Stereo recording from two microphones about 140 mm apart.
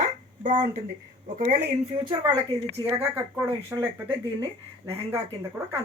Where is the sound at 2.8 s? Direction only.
15° right (ahead or behind).